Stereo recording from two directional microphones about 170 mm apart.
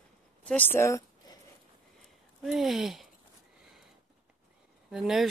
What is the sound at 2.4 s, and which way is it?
Speech, centre (ahead or behind).